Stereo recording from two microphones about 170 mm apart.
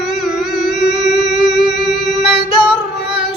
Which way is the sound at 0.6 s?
Centre (ahead or behind).